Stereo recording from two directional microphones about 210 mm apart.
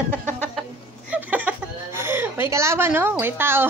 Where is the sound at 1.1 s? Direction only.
5° right (ahead or behind).